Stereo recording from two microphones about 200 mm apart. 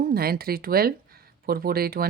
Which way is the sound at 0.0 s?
50° right (ahead or behind).